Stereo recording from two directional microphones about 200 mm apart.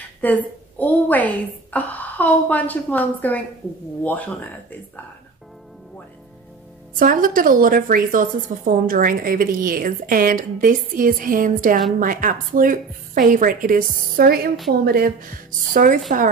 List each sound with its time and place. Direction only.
0.2 s a woman's voice: 10° left (ahead or behind)
7.0 s a woman's voice: 45° right (ahead or behind)